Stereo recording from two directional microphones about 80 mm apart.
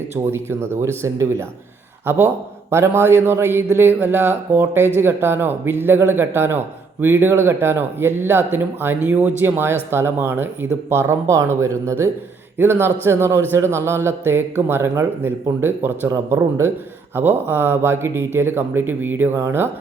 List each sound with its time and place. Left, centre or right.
0.1 s a man's voice: right